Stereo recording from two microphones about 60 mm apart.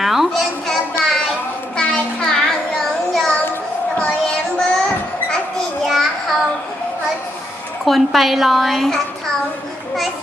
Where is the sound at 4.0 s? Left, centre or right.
Centre.